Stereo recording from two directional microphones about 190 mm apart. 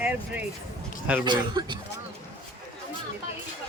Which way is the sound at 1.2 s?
25° right (ahead or behind).